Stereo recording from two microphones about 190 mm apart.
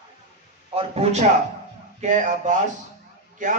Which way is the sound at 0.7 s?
30° right (ahead or behind).